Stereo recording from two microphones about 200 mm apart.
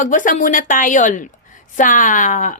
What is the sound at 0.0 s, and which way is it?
A woman's voice, 40° left (ahead or behind).